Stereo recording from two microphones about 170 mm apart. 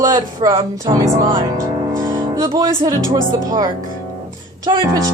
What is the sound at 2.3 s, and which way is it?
Speech, 20° right (ahead or behind).